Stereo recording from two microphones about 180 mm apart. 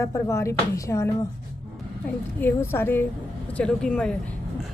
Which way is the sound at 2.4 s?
15° left (ahead or behind).